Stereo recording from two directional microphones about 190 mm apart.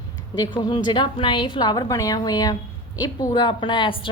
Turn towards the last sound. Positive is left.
turn(degrees=25)  # may be behind; listen again after turning